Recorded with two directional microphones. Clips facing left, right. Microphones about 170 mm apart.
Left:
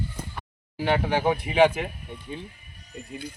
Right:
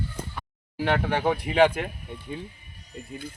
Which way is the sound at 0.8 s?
5° left (ahead or behind).